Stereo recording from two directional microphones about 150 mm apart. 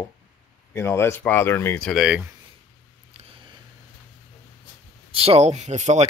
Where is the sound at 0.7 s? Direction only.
15° left (ahead or behind).